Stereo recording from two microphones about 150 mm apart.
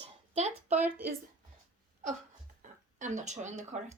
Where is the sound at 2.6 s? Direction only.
55° right (ahead or behind).